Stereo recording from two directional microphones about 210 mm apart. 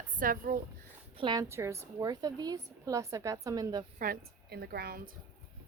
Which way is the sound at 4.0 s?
45° right (ahead or behind).